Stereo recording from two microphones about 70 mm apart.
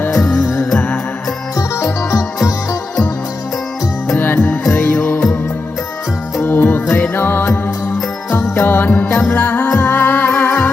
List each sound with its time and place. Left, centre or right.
0.2 s music: centre
1.5 s music: left
4.2 s music: left
6.4 s music: left
8.3 s jingle bell: left
8.6 s music: left